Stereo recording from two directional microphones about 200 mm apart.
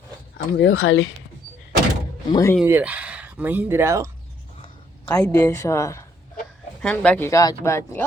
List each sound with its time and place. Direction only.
0.3 s speech: 85° left
2.3 s speech: 15° left (ahead or behind)
2.6 s speech: 10° right (ahead or behind)
5.0 s speech: 10° left (ahead or behind)